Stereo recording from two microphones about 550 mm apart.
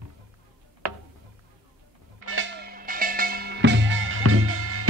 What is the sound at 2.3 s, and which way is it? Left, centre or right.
Music, centre.